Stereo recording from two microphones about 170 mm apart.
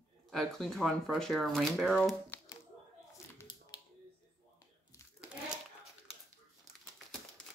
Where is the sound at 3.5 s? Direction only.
30° left (ahead or behind).